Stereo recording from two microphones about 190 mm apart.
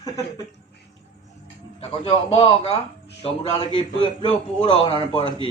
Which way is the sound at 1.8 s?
30° left (ahead or behind).